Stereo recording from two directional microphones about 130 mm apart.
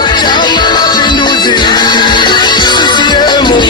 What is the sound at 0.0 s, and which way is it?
Music, 35° left (ahead or behind).